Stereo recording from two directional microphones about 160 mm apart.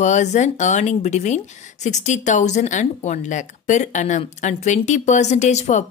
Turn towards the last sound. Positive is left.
turn(degrees=45)  # may be behind; listen again after turning